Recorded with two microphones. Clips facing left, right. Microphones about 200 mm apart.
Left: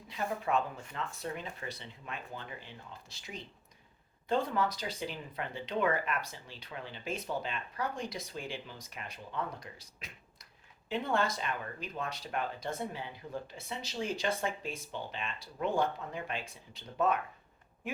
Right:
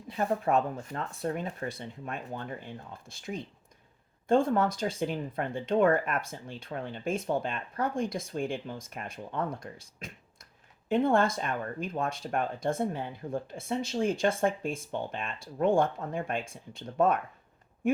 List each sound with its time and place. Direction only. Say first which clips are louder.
0.1 s speech: right 6 dB; 50° right (ahead or behind)